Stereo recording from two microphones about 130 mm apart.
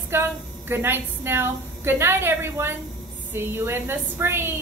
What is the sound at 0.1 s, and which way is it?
A woman's voice, 20° right (ahead or behind).